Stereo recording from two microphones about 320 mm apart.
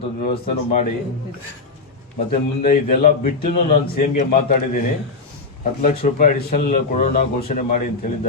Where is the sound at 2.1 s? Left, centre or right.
Left.